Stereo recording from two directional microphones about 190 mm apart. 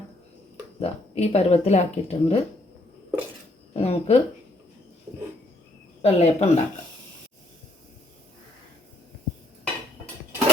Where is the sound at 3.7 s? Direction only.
35° left (ahead or behind).